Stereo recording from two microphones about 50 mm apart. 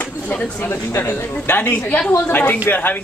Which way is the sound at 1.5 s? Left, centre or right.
Left.